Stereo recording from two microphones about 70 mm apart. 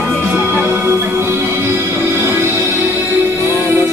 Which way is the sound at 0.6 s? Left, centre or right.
Right.